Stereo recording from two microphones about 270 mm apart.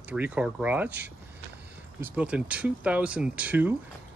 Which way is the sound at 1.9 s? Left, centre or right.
Centre.